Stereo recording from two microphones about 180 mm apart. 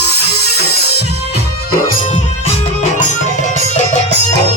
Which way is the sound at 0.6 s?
65° left (ahead or behind).